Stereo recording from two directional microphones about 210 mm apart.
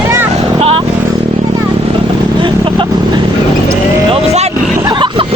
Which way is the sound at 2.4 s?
25° right (ahead or behind).